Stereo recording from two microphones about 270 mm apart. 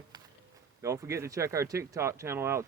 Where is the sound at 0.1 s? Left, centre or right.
Centre.